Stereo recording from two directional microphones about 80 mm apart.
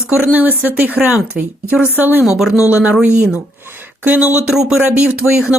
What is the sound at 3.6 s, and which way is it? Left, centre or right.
Speech, right.